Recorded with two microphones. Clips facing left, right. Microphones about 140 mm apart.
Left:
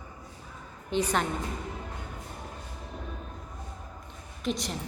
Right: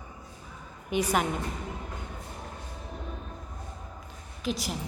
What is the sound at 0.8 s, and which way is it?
Speech, 10° right (ahead or behind).